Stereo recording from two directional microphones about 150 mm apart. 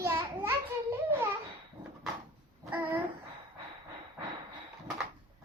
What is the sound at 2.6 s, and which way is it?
Babbling, 10° right (ahead or behind).